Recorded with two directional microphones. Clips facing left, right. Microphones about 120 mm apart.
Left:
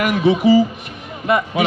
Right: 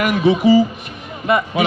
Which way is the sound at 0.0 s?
35° right (ahead or behind).